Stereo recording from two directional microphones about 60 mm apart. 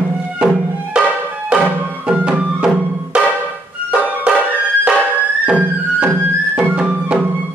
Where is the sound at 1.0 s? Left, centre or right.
Centre.